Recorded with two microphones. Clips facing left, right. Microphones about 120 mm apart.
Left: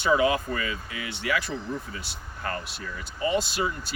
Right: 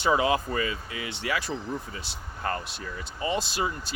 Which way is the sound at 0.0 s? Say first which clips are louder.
Left 1 dB; 25° right (ahead or behind).